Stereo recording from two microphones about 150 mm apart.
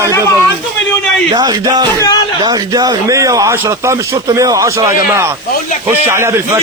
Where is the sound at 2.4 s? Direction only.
25° right (ahead or behind).